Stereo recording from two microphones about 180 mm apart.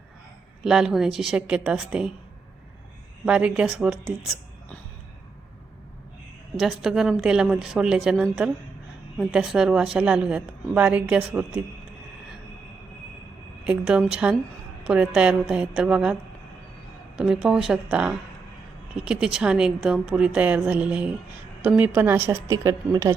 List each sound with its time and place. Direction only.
0.6 s a woman's voice: 5° right (ahead or behind)
3.2 s speech: 5° right (ahead or behind)
6.6 s a woman's voice: centre (ahead or behind)
13.7 s a woman's voice: 5° right (ahead or behind)
17.2 s a woman's voice: 5° right (ahead or behind)